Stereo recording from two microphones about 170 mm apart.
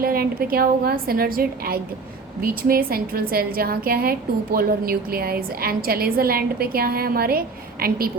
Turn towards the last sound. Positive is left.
turn(degrees=-65)  # may be behind; listen again after turning